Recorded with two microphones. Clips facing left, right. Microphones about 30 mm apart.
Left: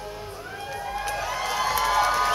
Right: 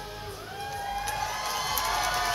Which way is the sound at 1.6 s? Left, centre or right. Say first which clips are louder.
Left 7 dB; left.